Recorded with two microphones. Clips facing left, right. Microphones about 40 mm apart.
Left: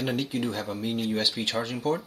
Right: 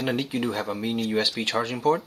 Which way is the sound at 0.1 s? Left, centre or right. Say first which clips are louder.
Right 2 dB; centre.